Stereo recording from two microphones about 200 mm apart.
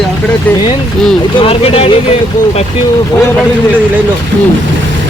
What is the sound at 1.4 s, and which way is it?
Speech, 30° left (ahead or behind).